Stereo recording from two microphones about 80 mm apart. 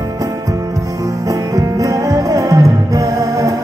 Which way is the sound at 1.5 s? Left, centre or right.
Right.